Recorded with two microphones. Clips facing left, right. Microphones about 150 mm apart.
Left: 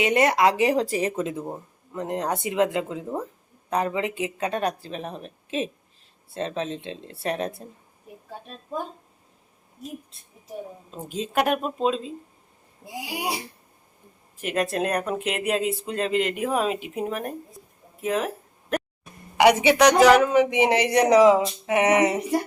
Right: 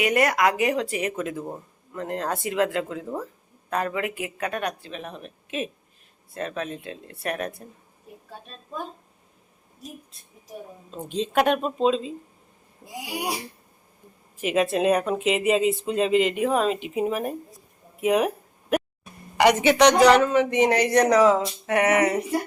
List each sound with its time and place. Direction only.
0.0 s speech: 25° left (ahead or behind)
10.9 s speech: 5° left (ahead or behind)
14.4 s speech: centre (ahead or behind)
18.0 s speech: 15° right (ahead or behind)
18.7 s a sound: 10° right (ahead or behind)
19.4 s speech: 10° left (ahead or behind); by 22.1 s 25° left (ahead or behind)